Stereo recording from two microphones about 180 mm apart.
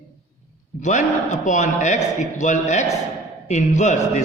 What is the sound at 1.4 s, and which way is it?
A man's voice, 40° left (ahead or behind).